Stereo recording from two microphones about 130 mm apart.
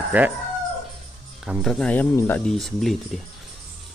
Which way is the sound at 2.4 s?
Centre (ahead or behind).